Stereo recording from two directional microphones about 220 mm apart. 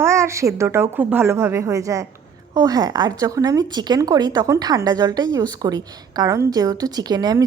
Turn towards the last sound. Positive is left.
turn(degrees=-15)  # may be behind; listen again after turning